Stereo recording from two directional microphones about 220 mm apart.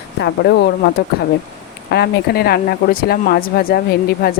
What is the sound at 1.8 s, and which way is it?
Speech, 45° left (ahead or behind).